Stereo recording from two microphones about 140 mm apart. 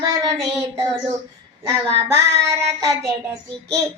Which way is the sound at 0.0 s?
25° right (ahead or behind).